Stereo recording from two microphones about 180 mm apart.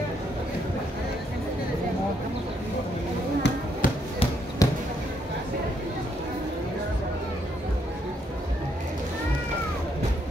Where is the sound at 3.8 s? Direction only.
50° left (ahead or behind).